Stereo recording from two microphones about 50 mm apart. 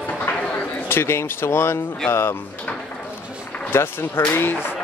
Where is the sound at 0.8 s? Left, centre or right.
Left.